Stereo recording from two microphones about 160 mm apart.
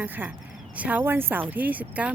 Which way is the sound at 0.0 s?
10° right (ahead or behind).